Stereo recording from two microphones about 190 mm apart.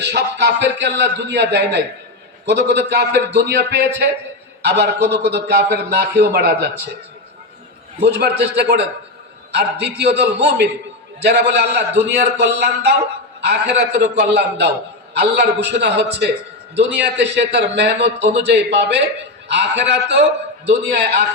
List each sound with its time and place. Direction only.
0.0 s a man's voice: 60° right (ahead or behind)
8.0 s a man's voice: 60° right (ahead or behind)